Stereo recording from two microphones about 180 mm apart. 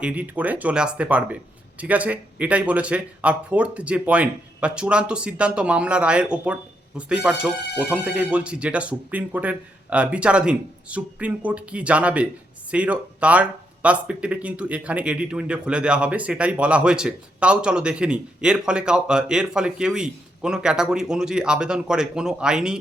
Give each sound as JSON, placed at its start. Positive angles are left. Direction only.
{"t": 0.0, "sound": "speech", "side_deg": -10}